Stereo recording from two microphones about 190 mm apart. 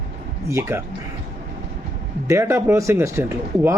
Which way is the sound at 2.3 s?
15° right (ahead or behind).